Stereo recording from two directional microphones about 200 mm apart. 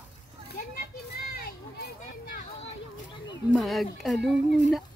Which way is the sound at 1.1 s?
50° left (ahead or behind).